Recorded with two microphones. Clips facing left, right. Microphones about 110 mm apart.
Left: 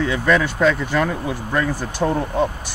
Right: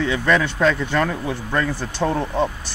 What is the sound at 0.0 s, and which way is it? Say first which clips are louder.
Speech: left 1 dB; 5° left (ahead or behind).